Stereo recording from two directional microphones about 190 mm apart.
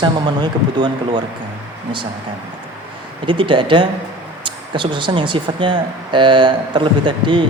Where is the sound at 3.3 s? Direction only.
25° right (ahead or behind).